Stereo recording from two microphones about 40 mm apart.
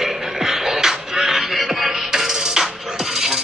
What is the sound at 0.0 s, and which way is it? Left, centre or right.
Music, centre.